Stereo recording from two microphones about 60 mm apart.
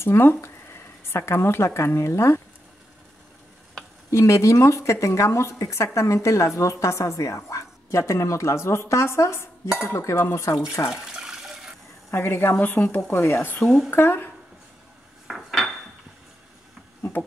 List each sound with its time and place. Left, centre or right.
0.0 s speech: left
4.1 s a woman's voice: left
10.9 s water: centre
12.1 s speech: left
15.2 s dishes: centre